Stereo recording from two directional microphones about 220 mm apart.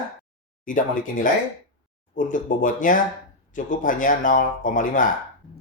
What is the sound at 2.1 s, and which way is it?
Speech, 35° left (ahead or behind).